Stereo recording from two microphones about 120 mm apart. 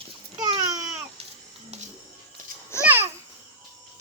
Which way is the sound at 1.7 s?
65° right (ahead or behind).